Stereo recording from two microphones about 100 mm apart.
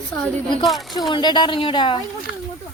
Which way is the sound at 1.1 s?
50° left (ahead or behind).